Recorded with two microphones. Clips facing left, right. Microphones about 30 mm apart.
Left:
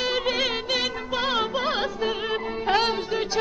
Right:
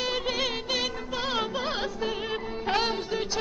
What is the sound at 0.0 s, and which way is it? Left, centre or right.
Music, centre.